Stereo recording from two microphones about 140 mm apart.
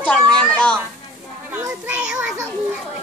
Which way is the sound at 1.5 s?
15° right (ahead or behind).